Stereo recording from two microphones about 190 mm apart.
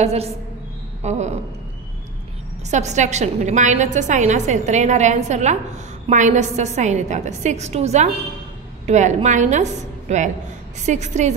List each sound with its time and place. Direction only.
0.0 s a woman's voice: 35° right (ahead or behind)
2.7 s a woman's voice: 40° right (ahead or behind)